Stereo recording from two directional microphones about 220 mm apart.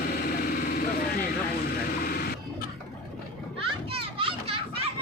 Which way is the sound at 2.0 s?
45° left (ahead or behind).